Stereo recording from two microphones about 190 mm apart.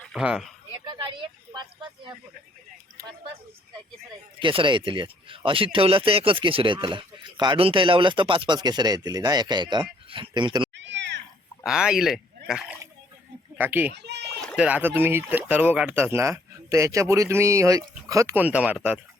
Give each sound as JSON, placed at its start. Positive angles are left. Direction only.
{"t": 0.0, "sound": "speech", "side_deg": 0}
{"t": 1.1, "sound": "vehicle", "side_deg": -25}
{"t": 3.0, "sound": "speech", "side_deg": -15}
{"t": 4.4, "sound": "speech", "side_deg": -25}
{"t": 10.8, "sound": "cat", "side_deg": -70}
{"t": 11.6, "sound": "speech", "side_deg": -5}
{"t": 13.9, "sound": "speech", "side_deg": -60}
{"t": 14.4, "sound": "speech", "side_deg": -5}